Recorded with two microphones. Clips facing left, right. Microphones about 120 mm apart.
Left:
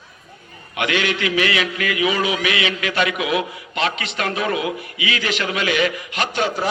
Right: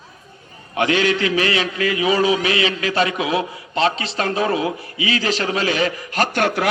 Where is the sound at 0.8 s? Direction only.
35° right (ahead or behind).